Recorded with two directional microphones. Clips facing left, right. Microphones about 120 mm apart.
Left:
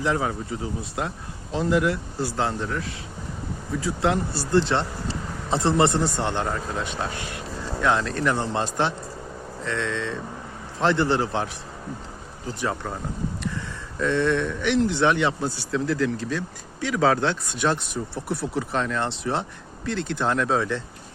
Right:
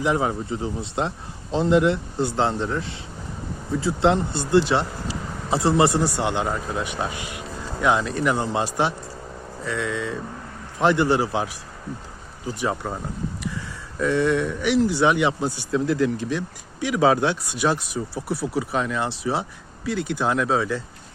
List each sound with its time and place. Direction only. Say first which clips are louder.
0.0 s a man's voice: right 2 dB; 20° right (ahead or behind)
14.0 s speech: right 2 dB; 10° right (ahead or behind)